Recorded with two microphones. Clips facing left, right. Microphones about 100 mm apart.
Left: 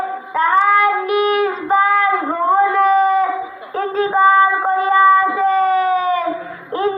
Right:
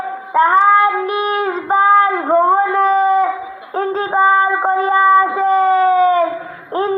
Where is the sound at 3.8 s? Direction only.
30° right (ahead or behind).